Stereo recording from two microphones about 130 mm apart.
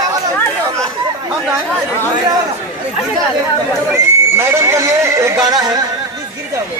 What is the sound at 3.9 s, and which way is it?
Speech, 20° right (ahead or behind).